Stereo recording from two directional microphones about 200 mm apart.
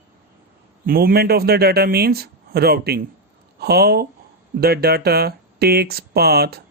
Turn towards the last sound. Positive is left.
turn(degrees=-50)  # may be behind; listen again after turning